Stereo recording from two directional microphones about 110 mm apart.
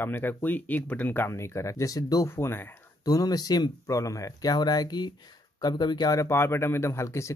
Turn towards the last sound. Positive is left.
turn(degrees=25)  # may be behind; listen again after turning